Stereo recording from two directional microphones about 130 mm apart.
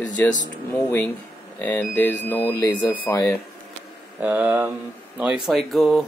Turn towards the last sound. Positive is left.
turn(degrees=0)  # may be behind; listen again after turning